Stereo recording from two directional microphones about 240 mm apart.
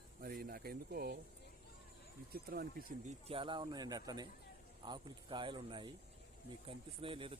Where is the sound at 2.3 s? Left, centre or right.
Right.